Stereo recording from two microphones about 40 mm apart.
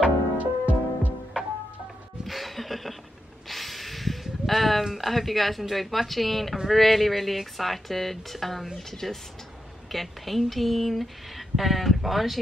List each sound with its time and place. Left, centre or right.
0.0 s music: right
2.2 s music: centre
3.4 s a sound: centre
4.9 s a woman's voice: centre